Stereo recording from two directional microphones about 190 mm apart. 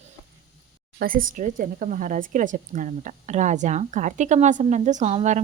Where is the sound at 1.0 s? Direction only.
45° right (ahead or behind).